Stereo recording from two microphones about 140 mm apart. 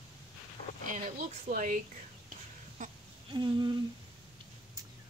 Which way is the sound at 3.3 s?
35° right (ahead or behind).